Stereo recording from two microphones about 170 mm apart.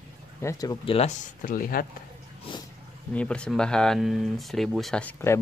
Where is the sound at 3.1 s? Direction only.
5° left (ahead or behind).